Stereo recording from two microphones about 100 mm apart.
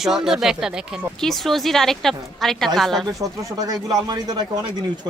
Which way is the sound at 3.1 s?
35° right (ahead or behind).